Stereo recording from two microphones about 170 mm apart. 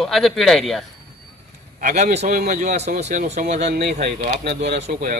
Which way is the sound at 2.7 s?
40° right (ahead or behind).